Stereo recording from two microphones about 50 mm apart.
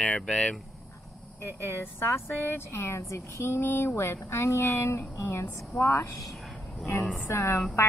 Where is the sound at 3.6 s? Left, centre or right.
Left.